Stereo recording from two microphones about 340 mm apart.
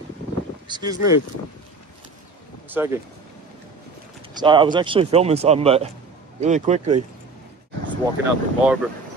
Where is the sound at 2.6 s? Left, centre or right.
Centre.